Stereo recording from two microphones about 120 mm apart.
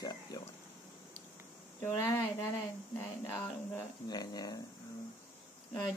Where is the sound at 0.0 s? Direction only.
30° left (ahead or behind).